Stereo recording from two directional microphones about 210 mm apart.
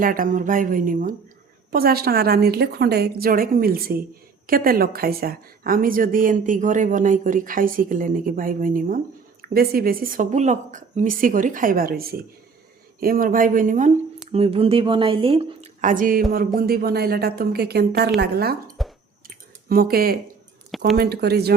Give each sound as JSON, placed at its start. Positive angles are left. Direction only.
{"t": 0.0, "sound": "a woman's voice", "side_deg": -40}
{"t": 14.3, "sound": "a woman's voice", "side_deg": -25}
{"t": 18.8, "sound": "a sound", "side_deg": 0}
{"t": 19.6, "sound": "a woman's voice", "side_deg": -45}
{"t": 20.7, "sound": "a sound", "side_deg": 0}
{"t": 20.9, "sound": "a woman's voice", "side_deg": -50}